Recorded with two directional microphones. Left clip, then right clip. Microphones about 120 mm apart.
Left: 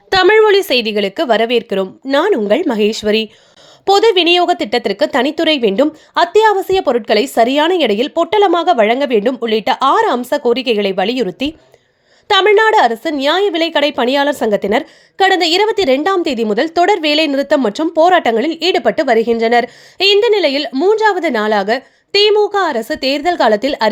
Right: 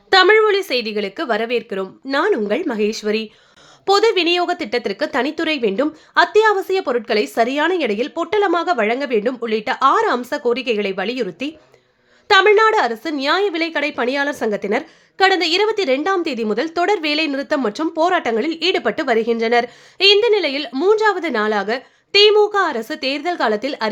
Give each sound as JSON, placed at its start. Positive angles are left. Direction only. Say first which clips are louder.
{"t": 0.1, "sound": "speech", "louder": "left 3 dB", "side_deg": 50}
{"t": 3.8, "sound": "a woman's voice", "louder": "left 5 dB", "side_deg": 30}
{"t": 20.7, "sound": "a woman's voice", "louder": "left 1 dB", "side_deg": 25}